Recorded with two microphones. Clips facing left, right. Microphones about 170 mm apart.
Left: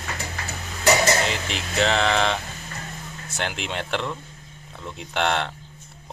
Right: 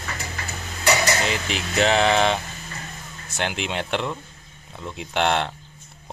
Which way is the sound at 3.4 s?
5° right (ahead or behind).